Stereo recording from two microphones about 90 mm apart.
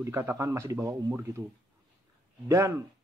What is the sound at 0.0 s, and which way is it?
Speech, 30° right (ahead or behind).